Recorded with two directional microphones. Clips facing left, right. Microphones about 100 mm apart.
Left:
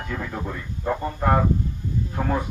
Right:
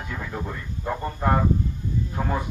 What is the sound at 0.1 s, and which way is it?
Speech, centre (ahead or behind).